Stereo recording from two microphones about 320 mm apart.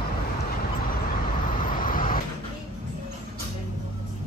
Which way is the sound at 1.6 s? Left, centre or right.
Left.